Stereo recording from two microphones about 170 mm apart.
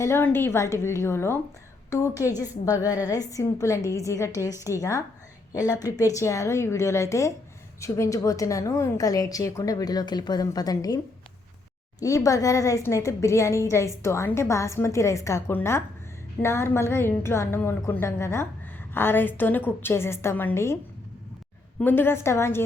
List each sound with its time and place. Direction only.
0.0 s a woman's voice: 15° left (ahead or behind)
21.8 s a woman's voice: 10° left (ahead or behind)